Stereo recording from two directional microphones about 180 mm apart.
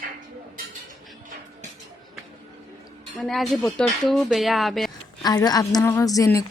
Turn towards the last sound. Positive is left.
turn(degrees=20)  # may be behind; listen again after turning